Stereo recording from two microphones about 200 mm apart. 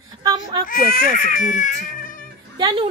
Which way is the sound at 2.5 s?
25° right (ahead or behind).